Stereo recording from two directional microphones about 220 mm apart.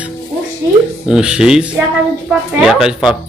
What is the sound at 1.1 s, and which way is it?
Speech, 5° right (ahead or behind).